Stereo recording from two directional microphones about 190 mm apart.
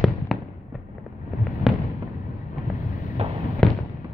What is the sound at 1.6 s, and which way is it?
Fireworks, centre (ahead or behind).